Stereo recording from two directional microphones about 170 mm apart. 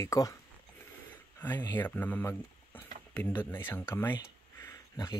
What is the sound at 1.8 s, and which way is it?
Speech, 10° left (ahead or behind).